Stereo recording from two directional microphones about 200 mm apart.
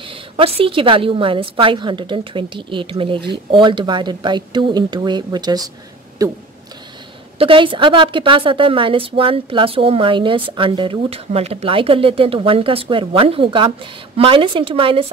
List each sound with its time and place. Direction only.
0.1 s a woman's voice: 25° right (ahead or behind)